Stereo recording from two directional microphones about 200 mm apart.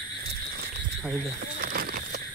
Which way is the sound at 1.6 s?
45° right (ahead or behind).